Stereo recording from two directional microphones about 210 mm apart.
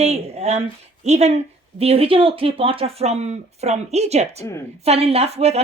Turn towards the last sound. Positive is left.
turn(degrees=-30)  # may be behind; listen again after turning